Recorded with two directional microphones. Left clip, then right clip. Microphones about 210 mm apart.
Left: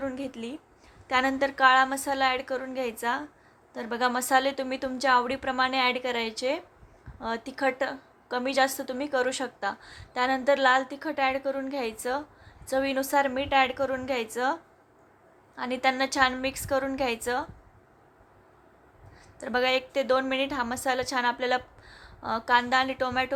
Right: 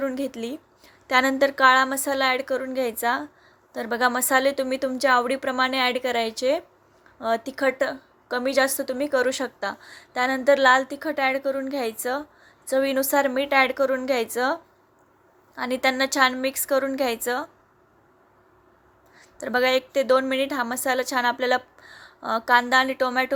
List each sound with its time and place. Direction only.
0.0 s a woman's voice: 25° right (ahead or behind)
19.1 s a woman's voice: 20° right (ahead or behind)